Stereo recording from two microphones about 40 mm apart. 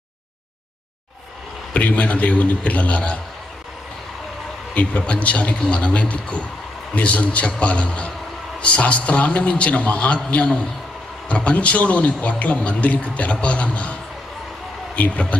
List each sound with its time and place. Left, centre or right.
1.7 s a man's voice: left
4.7 s a man's voice: left
15.0 s a man's voice: left